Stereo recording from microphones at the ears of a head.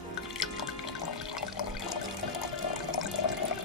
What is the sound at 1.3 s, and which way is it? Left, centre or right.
Water, left.